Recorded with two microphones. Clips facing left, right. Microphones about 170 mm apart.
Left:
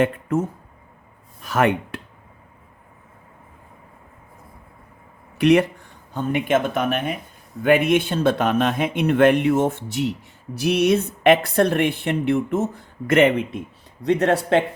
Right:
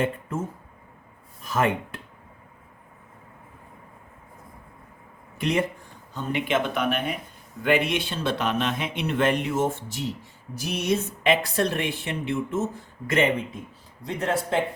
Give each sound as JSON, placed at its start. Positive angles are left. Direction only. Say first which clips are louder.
{"t": 0.0, "sound": "speech", "louder": "left 7 dB", "side_deg": 75}
{"t": 5.4, "sound": "speech", "louder": "left 9 dB", "side_deg": 75}
{"t": 6.1, "sound": "a man's voice", "louder": "left 5 dB", "side_deg": 50}